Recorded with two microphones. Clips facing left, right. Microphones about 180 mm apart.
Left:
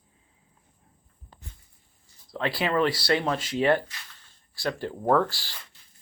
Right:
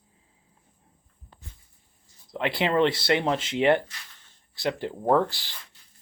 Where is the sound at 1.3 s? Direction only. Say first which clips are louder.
Left 1 dB; 40° left (ahead or behind).